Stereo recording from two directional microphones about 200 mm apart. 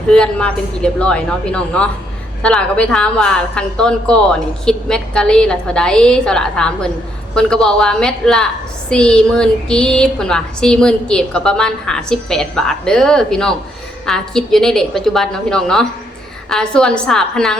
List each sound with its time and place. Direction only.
0.1 s speech: 5° left (ahead or behind)